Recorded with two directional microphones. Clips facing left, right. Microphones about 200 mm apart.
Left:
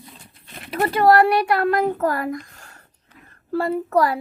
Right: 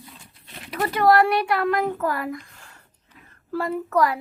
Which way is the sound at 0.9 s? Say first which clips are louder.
Left 2 dB; 35° left (ahead or behind).